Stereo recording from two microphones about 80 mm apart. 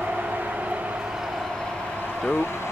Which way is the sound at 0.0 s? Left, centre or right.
Centre.